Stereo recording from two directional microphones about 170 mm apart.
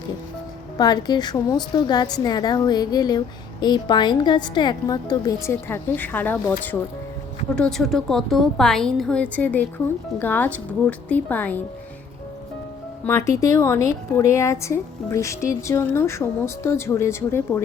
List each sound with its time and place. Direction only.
0.8 s a woman's voice: 25° left (ahead or behind)
7.5 s a woman's voice: 5° left (ahead or behind)
13.1 s a woman's voice: 15° left (ahead or behind)